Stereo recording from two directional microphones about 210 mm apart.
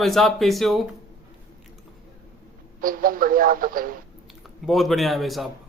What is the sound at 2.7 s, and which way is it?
Speech, 40° right (ahead or behind).